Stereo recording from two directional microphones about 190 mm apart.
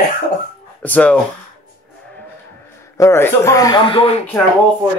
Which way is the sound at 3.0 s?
15° left (ahead or behind).